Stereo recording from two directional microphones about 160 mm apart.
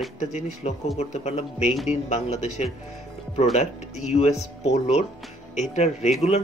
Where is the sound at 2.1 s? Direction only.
45° left (ahead or behind).